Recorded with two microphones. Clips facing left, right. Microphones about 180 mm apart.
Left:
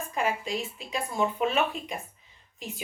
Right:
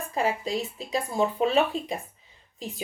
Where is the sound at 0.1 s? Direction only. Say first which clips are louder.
Right 3 dB; 35° right (ahead or behind).